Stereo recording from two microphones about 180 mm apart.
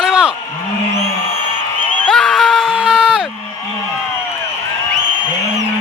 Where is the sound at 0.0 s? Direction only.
5° right (ahead or behind).